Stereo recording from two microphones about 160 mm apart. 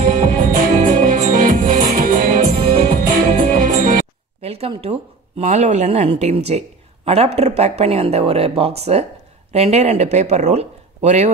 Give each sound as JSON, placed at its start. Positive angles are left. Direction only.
{"t": 0.0, "sound": "music", "side_deg": -55}
{"t": 4.4, "sound": "a sound", "side_deg": -40}
{"t": 5.4, "sound": "speech", "side_deg": -45}